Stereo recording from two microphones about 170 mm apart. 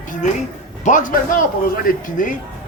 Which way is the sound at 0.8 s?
50° left (ahead or behind).